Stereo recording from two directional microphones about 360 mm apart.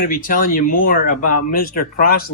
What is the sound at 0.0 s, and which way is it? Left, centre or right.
Speech, left.